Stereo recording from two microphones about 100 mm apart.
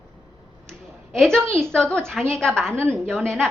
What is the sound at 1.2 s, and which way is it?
Speech, 5° left (ahead or behind).